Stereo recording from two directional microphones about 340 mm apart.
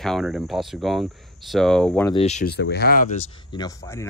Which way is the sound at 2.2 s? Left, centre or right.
Centre.